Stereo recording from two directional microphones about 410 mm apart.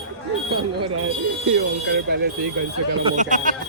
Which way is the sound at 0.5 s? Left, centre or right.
Right.